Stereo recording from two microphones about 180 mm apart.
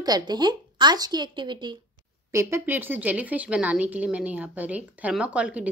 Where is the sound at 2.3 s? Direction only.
10° right (ahead or behind).